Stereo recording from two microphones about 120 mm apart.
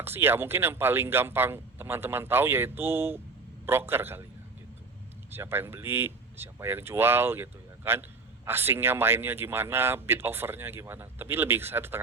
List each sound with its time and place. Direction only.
0.0 s speech: 20° right (ahead or behind)
5.3 s speech: 20° right (ahead or behind)